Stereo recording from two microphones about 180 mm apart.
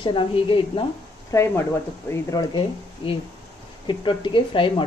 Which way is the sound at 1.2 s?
15° left (ahead or behind).